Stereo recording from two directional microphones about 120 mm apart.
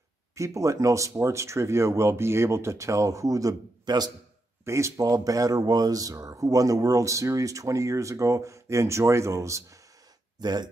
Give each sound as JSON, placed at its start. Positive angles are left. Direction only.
{"t": 0.3, "sound": "speech", "side_deg": -25}
{"t": 4.6, "sound": "speech", "side_deg": -25}
{"t": 10.4, "sound": "speech", "side_deg": -35}